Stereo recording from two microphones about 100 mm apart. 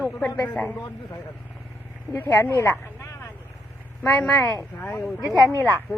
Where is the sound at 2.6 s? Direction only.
30° left (ahead or behind).